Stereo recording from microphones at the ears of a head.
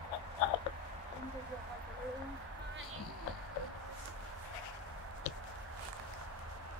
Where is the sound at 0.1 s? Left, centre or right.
Left.